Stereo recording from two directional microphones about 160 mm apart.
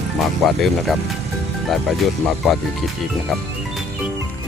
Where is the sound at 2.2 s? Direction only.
Centre (ahead or behind).